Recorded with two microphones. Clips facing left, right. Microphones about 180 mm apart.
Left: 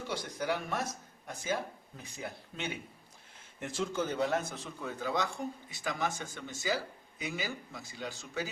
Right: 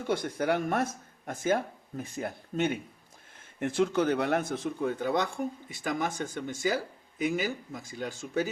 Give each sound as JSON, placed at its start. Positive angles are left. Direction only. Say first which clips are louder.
{"t": 0.1, "sound": "a man's voice", "louder": "right 7 dB", "side_deg": -55}